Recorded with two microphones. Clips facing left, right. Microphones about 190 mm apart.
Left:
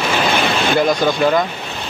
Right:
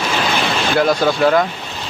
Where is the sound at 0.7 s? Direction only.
5° right (ahead or behind).